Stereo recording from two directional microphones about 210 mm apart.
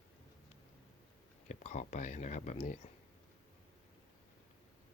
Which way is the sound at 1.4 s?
35° left (ahead or behind).